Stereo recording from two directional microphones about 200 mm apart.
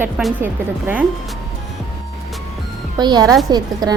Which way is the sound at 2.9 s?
20° right (ahead or behind).